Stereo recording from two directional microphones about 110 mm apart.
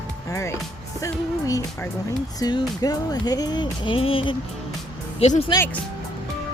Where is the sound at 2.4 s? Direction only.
40° left (ahead or behind); by 4.4 s 55° left (ahead or behind).